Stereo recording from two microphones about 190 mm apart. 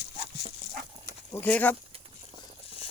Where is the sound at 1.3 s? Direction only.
10° left (ahead or behind).